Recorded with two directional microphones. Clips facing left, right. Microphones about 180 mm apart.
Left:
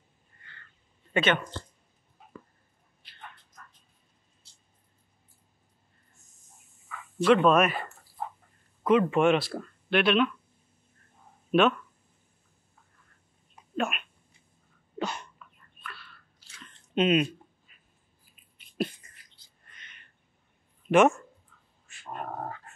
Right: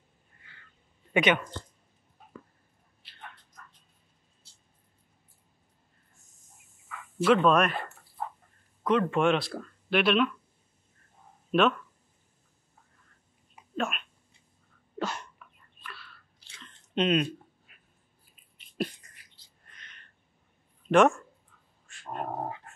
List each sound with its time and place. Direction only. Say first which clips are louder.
0.4 s a sound: left 3 dB; 5° right (ahead or behind)
1.1 s speech: right 1 dB; 15° right (ahead or behind)
7.2 s speech: left 1 dB; centre (ahead or behind)
8.8 s speech: left 3 dB; 5° left (ahead or behind)
11.5 s speech: left 2 dB; 5° left (ahead or behind)
13.7 s speech: left 2 dB; 5° left (ahead or behind)
15.0 s a sound: even; centre (ahead or behind)
16.9 s speech: left 2 dB; 5° left (ahead or behind)
19.7 s a sound: even; centre (ahead or behind)
20.9 s speech: left 1 dB; 5° left (ahead or behind)
21.8 s dog: right 2 dB; 5° left (ahead or behind)
22.2 s dog: right 2 dB; 20° right (ahead or behind)